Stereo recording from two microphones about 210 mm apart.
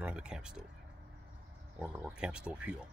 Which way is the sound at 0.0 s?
5° right (ahead or behind).